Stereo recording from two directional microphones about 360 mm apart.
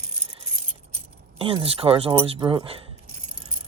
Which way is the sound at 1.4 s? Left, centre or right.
Centre.